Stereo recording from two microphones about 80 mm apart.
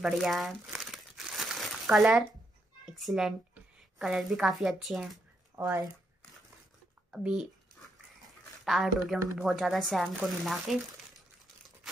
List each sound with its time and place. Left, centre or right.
0.0 s crumpling: centre
1.9 s a child's voice: centre
5.5 s a sound: right
7.1 s speech: centre
8.6 s a woman's voice: centre